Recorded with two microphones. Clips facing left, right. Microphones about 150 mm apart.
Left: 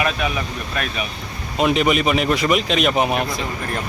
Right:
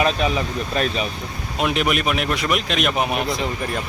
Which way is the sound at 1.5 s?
Centre (ahead or behind).